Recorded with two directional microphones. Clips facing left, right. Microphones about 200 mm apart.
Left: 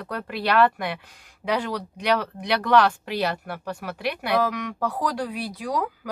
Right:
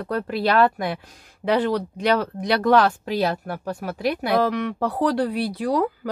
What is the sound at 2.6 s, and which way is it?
Speech, 45° right (ahead or behind).